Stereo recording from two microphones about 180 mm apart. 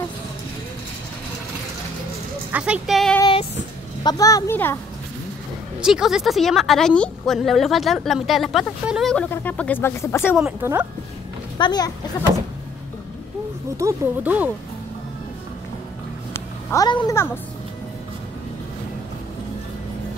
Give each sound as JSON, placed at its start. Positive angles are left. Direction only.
{"t": 2.5, "sound": "a woman's voice", "side_deg": -5}
{"t": 3.2, "sound": "child singing", "side_deg": 25}
{"t": 4.0, "sound": "speech", "side_deg": 20}
{"t": 5.8, "sound": "a woman's voice", "side_deg": -5}
{"t": 10.3, "sound": "a woman's voice", "side_deg": -5}
{"t": 11.5, "sound": "speech", "side_deg": 25}
{"t": 13.7, "sound": "speech", "side_deg": -15}
{"t": 16.3, "sound": "a child's voice", "side_deg": 20}